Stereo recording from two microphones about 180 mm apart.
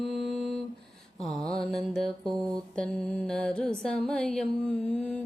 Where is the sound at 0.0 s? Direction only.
Centre (ahead or behind).